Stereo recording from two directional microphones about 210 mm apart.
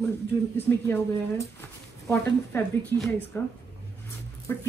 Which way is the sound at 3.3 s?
10° left (ahead or behind).